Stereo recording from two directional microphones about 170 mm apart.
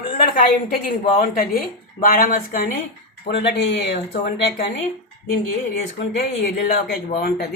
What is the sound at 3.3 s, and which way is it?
Speech, 75° left (ahead or behind).